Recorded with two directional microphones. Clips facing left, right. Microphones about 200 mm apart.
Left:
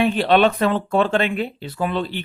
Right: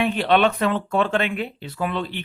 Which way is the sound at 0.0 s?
35° left (ahead or behind).